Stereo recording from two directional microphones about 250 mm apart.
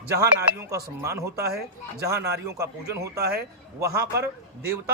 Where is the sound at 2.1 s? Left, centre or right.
Right.